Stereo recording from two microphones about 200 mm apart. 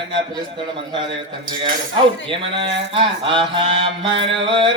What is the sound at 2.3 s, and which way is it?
Mantra, 25° right (ahead or behind).